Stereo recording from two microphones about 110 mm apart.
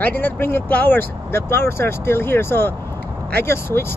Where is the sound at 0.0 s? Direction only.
15° left (ahead or behind).